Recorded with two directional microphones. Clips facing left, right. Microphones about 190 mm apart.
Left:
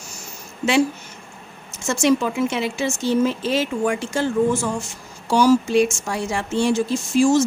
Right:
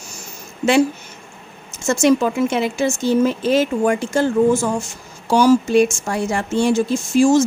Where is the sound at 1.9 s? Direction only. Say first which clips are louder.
Right 3 dB; 45° right (ahead or behind).